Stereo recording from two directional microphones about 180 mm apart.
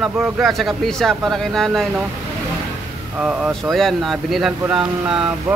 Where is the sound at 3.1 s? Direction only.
5° right (ahead or behind).